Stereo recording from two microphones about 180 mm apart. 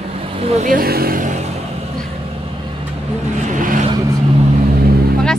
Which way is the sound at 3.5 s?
50° right (ahead or behind).